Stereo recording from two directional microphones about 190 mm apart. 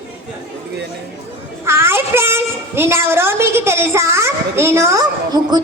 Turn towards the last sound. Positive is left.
turn(degrees=-20)  # may be behind; listen again after turning